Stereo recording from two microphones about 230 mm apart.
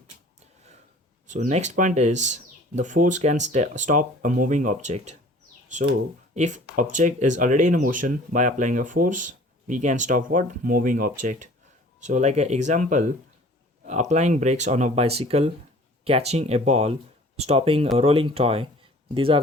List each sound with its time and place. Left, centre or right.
1.3 s speech: right